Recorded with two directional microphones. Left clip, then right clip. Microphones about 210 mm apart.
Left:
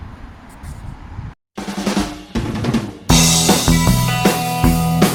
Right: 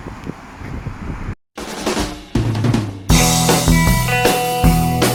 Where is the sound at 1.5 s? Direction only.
Centre (ahead or behind).